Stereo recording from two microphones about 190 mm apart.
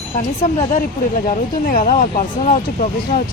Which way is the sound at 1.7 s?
45° left (ahead or behind).